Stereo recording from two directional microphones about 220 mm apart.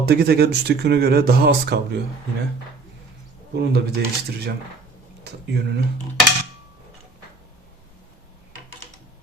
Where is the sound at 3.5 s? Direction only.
50° right (ahead or behind).